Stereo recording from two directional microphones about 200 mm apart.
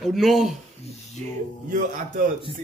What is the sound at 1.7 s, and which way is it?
Speech, 40° right (ahead or behind).